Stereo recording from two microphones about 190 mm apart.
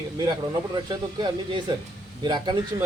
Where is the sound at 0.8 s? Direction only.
20° right (ahead or behind).